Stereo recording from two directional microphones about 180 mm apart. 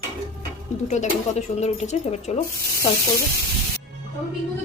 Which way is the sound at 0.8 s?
40° left (ahead or behind).